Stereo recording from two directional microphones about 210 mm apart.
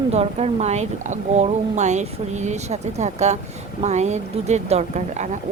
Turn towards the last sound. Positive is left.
turn(degrees=-35)  # may be behind; listen again after turning